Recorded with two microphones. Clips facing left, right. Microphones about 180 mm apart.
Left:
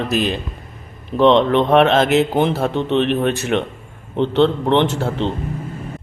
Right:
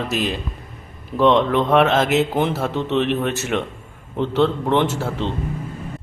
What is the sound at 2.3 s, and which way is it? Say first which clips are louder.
Speech: left 3 dB; 30° left (ahead or behind).